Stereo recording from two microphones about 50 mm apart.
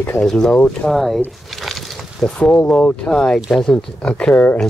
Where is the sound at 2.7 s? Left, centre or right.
Left.